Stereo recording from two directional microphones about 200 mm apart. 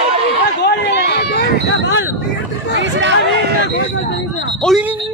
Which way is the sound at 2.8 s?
65° right (ahead or behind).